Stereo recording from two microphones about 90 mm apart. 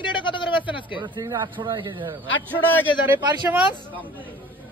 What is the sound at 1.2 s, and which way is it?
Speech, 45° right (ahead or behind).